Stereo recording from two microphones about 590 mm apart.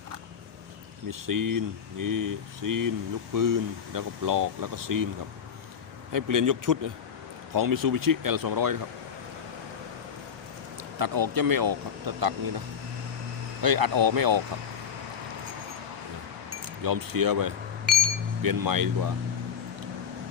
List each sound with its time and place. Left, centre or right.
1.3 s speech: right
6.1 s speech: right
10.9 s speech: right
13.6 s speech: right
16.8 s speech: right